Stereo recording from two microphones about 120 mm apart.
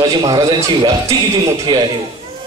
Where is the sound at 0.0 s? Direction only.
35° right (ahead or behind).